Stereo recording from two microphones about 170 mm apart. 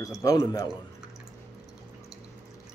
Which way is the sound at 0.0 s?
20° left (ahead or behind).